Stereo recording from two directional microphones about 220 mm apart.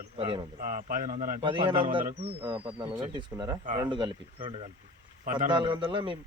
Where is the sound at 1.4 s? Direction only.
20° right (ahead or behind).